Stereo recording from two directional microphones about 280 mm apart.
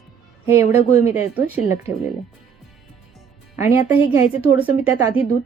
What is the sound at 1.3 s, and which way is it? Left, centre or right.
Speech, centre.